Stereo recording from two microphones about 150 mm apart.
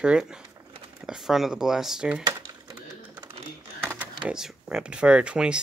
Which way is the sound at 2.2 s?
25° right (ahead or behind).